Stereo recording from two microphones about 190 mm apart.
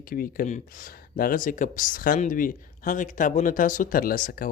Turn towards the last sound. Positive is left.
turn(degrees=45)  # may be behind; listen again after turning